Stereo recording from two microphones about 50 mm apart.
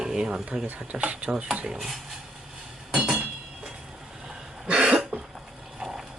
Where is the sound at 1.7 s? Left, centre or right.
Centre.